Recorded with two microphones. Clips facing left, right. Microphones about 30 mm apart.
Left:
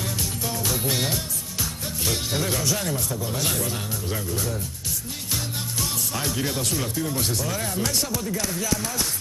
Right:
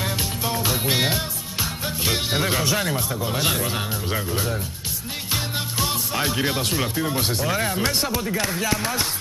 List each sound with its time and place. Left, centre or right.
0.0 s music: right
5.3 s speech: right